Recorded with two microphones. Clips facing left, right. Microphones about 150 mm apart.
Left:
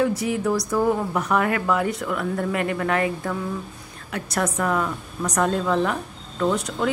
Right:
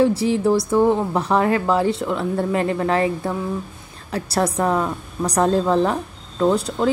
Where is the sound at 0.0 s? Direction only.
30° right (ahead or behind).